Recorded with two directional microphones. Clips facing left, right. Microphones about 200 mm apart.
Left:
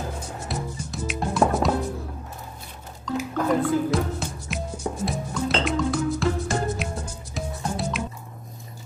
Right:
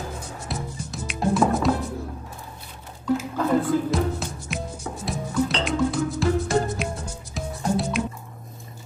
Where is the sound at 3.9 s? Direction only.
Centre (ahead or behind).